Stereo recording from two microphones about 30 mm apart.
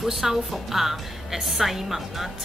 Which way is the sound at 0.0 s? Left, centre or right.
Centre.